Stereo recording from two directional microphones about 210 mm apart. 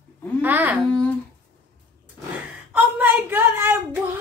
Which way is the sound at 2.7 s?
10° right (ahead or behind).